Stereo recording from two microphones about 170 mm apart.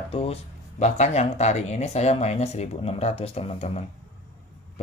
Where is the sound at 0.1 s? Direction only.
40° left (ahead or behind).